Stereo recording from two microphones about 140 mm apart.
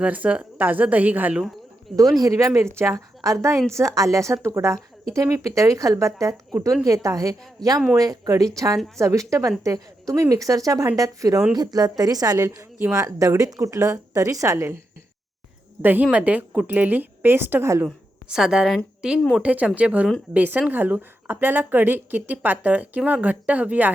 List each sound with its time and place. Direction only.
0.0 s a woman's voice: 10° right (ahead or behind)
2.1 s a woman's voice: 25° right (ahead or behind)
15.8 s a woman's voice: 15° right (ahead or behind)
17.8 s a woman's voice: 5° right (ahead or behind)